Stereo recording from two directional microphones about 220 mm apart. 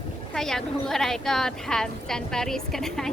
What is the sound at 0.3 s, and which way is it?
A woman's voice, centre (ahead or behind).